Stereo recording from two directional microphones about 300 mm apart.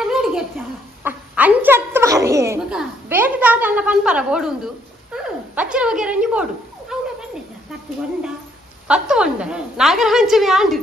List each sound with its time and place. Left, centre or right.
0.0 s a sound: centre
6.9 s cat: centre
8.8 s a woman's voice: centre